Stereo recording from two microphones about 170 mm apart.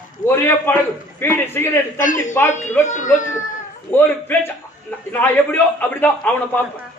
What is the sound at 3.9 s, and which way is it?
A man's voice, 10° left (ahead or behind).